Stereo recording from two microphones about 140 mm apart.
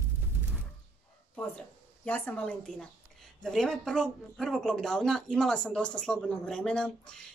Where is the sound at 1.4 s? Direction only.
10° left (ahead or behind).